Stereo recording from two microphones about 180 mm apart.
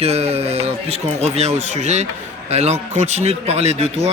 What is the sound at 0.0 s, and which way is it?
A man's voice, 35° right (ahead or behind).